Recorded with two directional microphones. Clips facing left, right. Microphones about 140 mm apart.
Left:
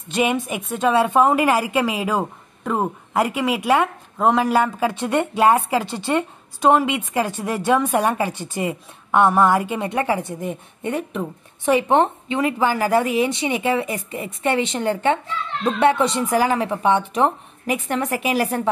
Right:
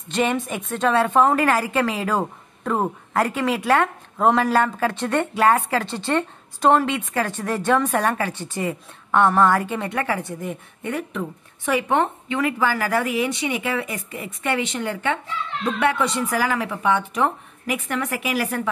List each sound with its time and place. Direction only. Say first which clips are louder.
0.1 s a woman's voice: left 1 dB; 10° left (ahead or behind); by 18.7 s 30° left (ahead or behind)